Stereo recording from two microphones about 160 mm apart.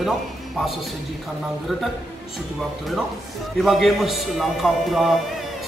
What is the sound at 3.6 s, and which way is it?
A man's voice, centre (ahead or behind).